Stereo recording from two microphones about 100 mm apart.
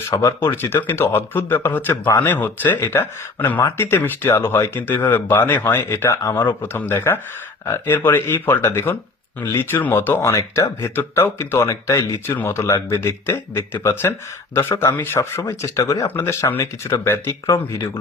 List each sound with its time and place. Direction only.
0.1 s speech: 35° left (ahead or behind)
0.3 s speech: 20° left (ahead or behind)